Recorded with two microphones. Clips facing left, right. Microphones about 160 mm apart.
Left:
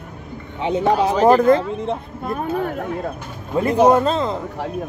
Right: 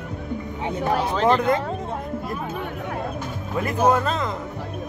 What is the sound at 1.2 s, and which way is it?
Speech, 40° left (ahead or behind).